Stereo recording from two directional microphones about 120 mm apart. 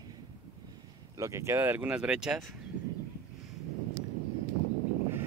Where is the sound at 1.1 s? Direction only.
25° right (ahead or behind); by 2.5 s centre (ahead or behind).